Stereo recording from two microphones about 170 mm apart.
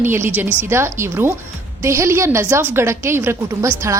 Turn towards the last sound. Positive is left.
turn(degrees=-20)  # may be behind; listen again after turning